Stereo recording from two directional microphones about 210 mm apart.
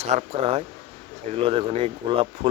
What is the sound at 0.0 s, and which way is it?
Speech, 30° right (ahead or behind).